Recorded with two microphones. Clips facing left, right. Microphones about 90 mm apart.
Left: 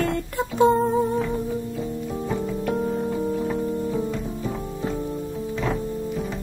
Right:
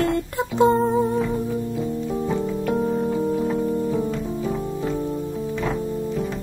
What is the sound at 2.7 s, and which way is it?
Keyboard, 10° right (ahead or behind).